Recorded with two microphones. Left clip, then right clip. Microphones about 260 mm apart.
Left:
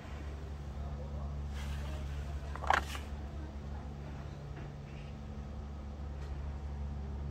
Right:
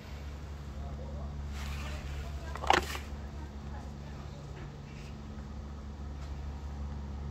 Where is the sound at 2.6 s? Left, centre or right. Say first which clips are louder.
Right 4 dB; right.